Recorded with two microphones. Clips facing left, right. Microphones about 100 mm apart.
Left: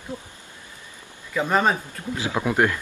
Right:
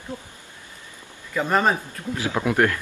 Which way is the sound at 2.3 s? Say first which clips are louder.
Right 1 dB; 15° left (ahead or behind).